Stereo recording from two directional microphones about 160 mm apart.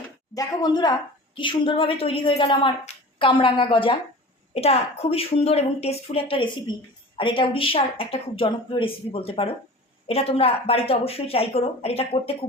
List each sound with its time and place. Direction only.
0.3 s speech: 25° left (ahead or behind)